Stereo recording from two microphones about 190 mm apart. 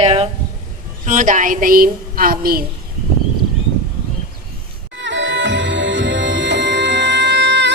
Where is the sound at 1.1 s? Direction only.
40° right (ahead or behind).